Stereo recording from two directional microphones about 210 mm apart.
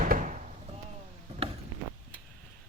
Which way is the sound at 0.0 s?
40° right (ahead or behind).